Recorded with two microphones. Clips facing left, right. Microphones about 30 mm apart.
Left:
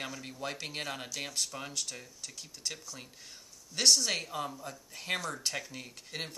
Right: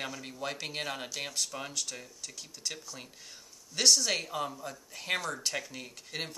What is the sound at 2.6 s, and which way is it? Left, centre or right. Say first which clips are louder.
Speech: right 1 dB; centre.